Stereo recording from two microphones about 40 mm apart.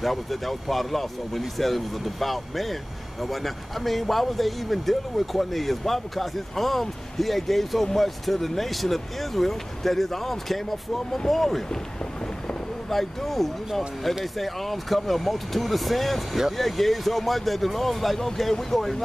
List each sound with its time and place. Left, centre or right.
0.0 s speech: centre
12.9 s speech: centre